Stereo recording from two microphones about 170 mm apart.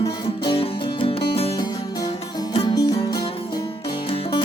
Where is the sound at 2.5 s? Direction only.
30° left (ahead or behind).